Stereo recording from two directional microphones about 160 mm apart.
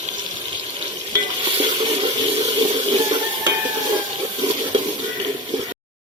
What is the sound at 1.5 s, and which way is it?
Water, 35° right (ahead or behind).